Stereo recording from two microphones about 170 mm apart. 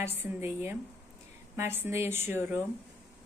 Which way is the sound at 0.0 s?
15° right (ahead or behind).